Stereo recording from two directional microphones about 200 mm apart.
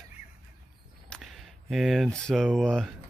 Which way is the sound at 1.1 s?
Centre (ahead or behind).